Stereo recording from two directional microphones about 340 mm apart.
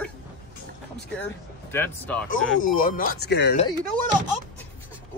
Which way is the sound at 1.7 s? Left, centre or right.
Centre.